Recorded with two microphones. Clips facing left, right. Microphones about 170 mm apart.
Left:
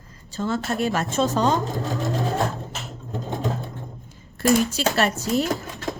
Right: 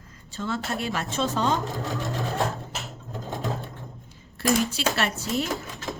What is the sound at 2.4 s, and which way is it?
Sewing machine, centre (ahead or behind).